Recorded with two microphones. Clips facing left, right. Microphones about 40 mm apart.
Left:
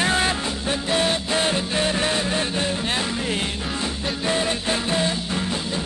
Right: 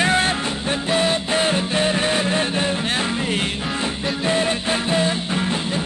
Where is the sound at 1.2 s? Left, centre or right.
Right.